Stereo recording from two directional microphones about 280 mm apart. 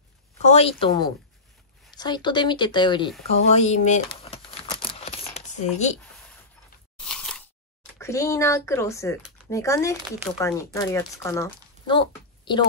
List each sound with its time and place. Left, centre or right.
0.5 s a woman's voice: left
3.5 s a sound: left
7.0 s biting: centre
8.0 s speech: centre